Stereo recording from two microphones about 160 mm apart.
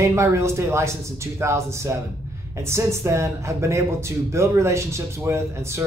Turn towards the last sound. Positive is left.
turn(degrees=-15)  # may be behind; listen again after turning